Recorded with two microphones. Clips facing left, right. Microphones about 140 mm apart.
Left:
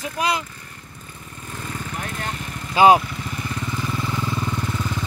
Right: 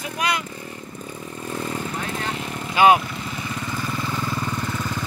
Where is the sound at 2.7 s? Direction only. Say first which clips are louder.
Left 2 dB; 30° left (ahead or behind).